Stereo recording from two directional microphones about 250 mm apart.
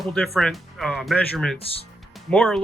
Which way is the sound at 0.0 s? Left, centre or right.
Centre.